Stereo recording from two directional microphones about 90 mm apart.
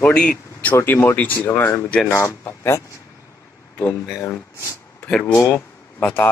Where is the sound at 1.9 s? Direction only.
10° left (ahead or behind).